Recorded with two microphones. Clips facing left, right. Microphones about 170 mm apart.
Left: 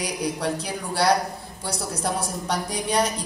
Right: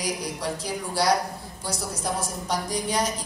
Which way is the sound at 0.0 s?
65° left (ahead or behind).